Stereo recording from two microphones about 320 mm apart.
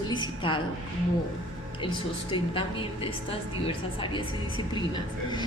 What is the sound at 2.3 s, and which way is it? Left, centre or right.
A woman's voice, centre.